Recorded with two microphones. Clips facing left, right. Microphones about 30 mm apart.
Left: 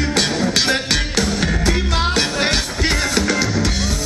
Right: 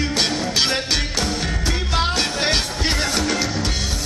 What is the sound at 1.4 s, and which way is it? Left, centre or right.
Music, left.